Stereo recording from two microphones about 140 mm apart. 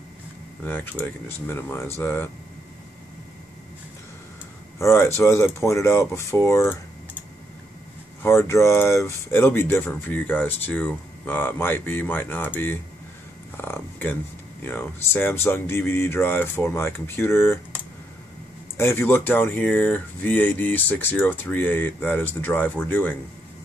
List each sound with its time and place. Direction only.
0.7 s speech: 15° left (ahead or behind)
4.7 s speech: 20° left (ahead or behind)
8.2 s speech: 20° left (ahead or behind)
18.8 s speech: 20° left (ahead or behind)